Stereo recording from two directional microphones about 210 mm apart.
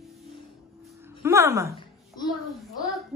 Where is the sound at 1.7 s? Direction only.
20° left (ahead or behind).